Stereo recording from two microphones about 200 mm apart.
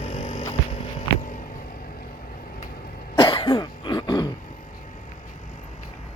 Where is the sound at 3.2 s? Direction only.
25° left (ahead or behind).